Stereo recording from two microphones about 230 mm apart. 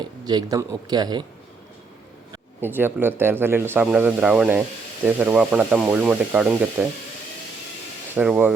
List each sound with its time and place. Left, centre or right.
0.0 s speech: centre
2.3 s speech: centre
8.1 s speech: centre